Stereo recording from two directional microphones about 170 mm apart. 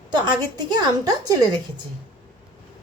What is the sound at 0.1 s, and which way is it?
A woman's voice, 25° right (ahead or behind).